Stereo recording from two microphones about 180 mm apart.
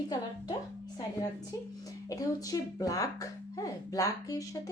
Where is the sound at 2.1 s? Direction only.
20° left (ahead or behind).